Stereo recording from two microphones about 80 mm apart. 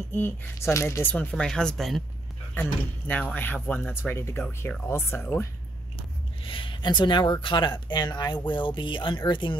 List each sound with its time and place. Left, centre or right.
0.1 s speech: left
1.0 s speech: centre
2.5 s speech: left
6.5 s speech: left
8.5 s speech: left